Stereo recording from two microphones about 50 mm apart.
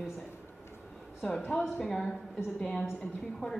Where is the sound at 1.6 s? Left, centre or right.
Centre.